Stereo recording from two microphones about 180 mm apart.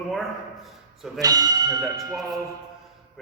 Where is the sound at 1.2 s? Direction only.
20° right (ahead or behind).